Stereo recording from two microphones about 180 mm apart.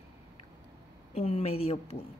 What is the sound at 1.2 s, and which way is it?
Speech, 35° left (ahead or behind).